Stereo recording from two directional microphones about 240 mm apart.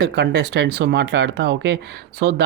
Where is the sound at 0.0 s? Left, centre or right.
Right.